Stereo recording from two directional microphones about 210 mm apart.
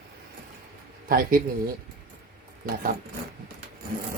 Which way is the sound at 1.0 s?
45° right (ahead or behind).